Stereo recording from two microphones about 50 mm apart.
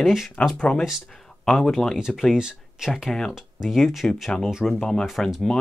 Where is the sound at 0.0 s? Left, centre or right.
Centre.